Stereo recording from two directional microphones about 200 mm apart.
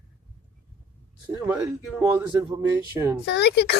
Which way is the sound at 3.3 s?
55° left (ahead or behind).